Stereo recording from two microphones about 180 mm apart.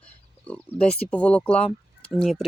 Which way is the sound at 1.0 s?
5° left (ahead or behind).